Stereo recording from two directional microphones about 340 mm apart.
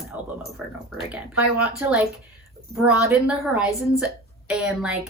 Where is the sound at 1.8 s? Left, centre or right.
Centre.